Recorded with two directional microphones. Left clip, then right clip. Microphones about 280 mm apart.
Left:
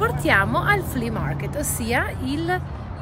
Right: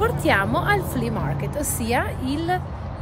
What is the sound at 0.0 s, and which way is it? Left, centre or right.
Speech, centre.